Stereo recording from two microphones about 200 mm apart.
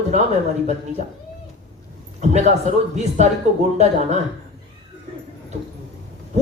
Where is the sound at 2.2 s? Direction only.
35° right (ahead or behind).